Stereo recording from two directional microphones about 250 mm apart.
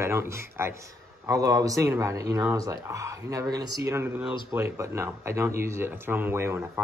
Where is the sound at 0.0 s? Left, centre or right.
Centre.